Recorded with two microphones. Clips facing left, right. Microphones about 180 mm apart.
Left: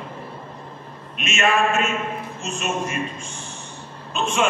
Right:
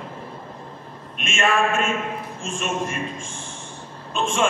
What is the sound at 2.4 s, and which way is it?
Speech, 50° right (ahead or behind).